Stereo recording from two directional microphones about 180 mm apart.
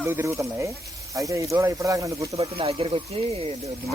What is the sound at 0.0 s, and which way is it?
Speech, 15° right (ahead or behind).